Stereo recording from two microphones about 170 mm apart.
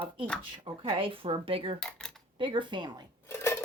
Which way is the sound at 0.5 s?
30° right (ahead or behind).